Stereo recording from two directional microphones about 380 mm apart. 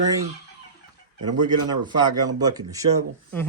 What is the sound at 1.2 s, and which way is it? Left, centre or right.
Speech, centre.